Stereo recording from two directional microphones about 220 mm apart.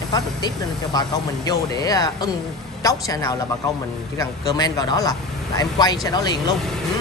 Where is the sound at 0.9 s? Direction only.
15° left (ahead or behind).